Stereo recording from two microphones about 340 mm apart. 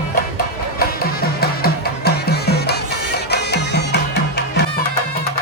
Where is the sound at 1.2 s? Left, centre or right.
Left.